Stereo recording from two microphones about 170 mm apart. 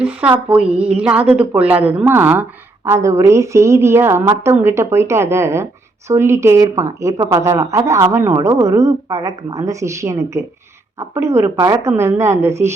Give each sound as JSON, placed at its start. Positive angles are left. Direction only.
{"t": 0.0, "sound": "a woman's voice", "side_deg": -10}